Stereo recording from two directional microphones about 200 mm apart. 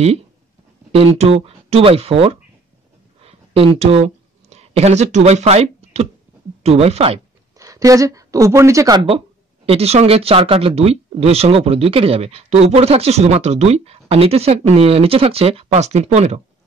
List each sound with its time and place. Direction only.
0.9 s speech: 30° right (ahead or behind)
3.2 s a sound: 30° right (ahead or behind)
6.6 s speech: 30° right (ahead or behind)
7.5 s a woman's voice: 15° right (ahead or behind); by 16.3 s 35° right (ahead or behind)